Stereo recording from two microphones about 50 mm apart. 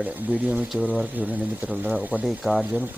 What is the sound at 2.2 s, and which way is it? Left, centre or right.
Speech, centre.